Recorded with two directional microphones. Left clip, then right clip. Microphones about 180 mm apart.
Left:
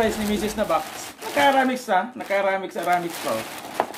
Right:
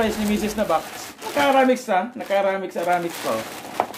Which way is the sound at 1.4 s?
5° right (ahead or behind).